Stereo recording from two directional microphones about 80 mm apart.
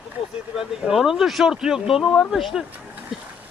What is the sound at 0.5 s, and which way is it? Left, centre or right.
Speech, centre.